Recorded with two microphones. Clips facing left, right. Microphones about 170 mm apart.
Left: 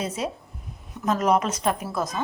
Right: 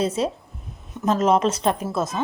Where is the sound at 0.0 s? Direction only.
30° right (ahead or behind).